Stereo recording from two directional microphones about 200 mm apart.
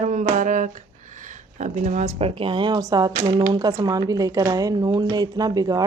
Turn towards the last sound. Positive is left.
turn(degrees=-20)  # may be behind; listen again after turning